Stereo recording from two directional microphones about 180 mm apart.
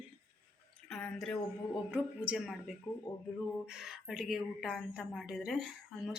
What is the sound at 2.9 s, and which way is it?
Speech, 20° left (ahead or behind).